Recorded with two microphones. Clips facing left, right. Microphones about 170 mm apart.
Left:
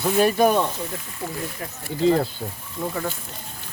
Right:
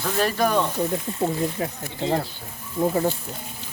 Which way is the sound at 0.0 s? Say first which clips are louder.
Left 4 dB; 10° left (ahead or behind).